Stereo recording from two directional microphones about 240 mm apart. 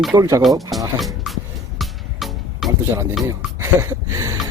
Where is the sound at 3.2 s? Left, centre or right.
Centre.